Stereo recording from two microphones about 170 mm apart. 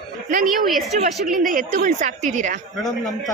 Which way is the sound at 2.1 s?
45° right (ahead or behind).